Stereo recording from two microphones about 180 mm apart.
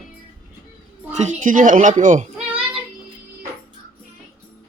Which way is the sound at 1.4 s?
45° right (ahead or behind).